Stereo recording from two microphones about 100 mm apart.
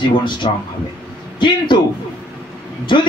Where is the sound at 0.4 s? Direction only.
70° left (ahead or behind).